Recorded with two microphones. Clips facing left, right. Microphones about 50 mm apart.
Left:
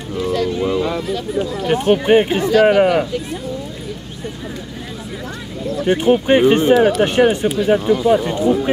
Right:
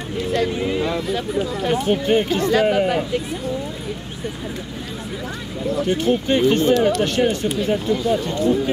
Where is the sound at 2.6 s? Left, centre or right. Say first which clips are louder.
Left 6 dB; left.